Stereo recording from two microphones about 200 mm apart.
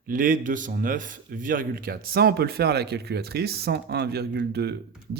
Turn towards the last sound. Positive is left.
turn(degrees=-55)  # may be behind; listen again after turning